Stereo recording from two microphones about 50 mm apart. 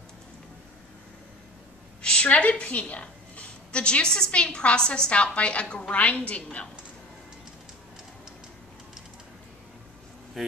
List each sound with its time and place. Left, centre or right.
2.0 s a woman's voice: left
10.4 s speech: centre